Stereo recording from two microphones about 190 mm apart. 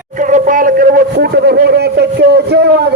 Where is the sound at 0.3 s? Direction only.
45° right (ahead or behind).